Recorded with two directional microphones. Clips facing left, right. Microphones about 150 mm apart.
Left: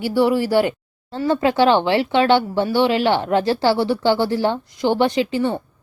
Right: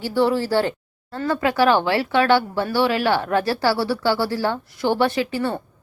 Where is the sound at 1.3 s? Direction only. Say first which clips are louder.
Left 2 dB; 25° left (ahead or behind).